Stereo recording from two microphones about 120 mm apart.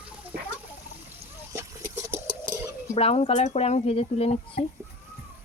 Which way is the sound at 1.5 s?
20° right (ahead or behind).